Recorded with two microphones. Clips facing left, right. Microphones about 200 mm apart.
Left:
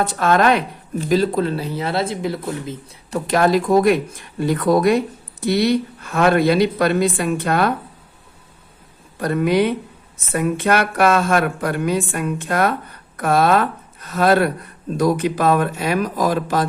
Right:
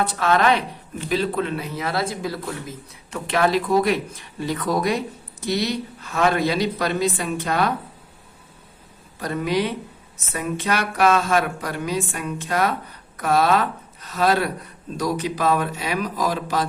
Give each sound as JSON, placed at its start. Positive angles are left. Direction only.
{"t": 0.2, "sound": "speech", "side_deg": 45}
{"t": 3.1, "sound": "a woman's voice", "side_deg": 40}
{"t": 9.2, "sound": "a woman's voice", "side_deg": 55}